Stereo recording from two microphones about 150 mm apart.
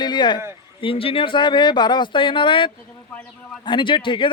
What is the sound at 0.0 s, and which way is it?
A man's voice, 30° left (ahead or behind).